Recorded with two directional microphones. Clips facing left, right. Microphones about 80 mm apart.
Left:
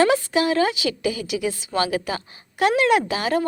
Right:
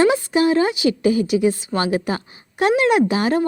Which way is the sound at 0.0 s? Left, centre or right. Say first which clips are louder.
Right 2 dB; right.